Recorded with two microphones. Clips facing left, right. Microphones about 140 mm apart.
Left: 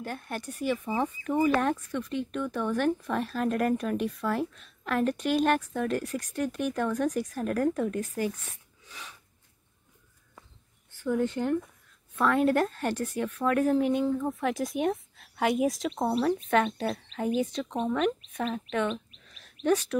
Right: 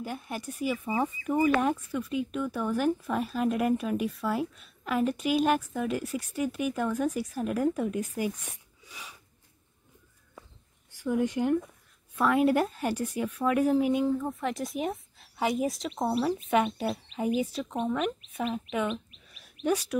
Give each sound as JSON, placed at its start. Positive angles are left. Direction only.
{"t": 0.0, "sound": "speech", "side_deg": -5}
{"t": 10.9, "sound": "speech", "side_deg": -10}